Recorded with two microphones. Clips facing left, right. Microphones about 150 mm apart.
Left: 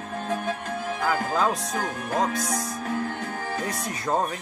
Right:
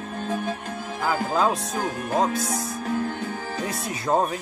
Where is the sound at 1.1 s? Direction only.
15° right (ahead or behind).